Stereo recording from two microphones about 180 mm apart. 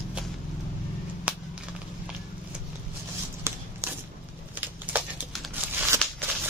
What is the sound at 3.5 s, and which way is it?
Walk, 15° right (ahead or behind).